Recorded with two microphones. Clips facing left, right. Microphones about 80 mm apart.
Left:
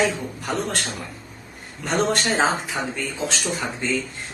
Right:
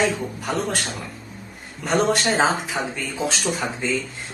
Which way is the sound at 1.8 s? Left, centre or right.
Centre.